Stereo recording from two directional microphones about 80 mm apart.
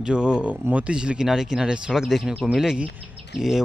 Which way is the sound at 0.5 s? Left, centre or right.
Right.